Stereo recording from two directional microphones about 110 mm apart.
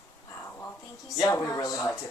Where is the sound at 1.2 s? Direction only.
30° left (ahead or behind).